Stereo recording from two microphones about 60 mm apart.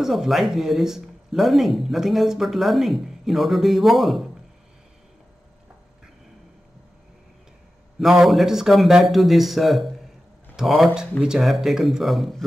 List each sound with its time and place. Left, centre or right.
0.0 s speech: centre
8.0 s speech: centre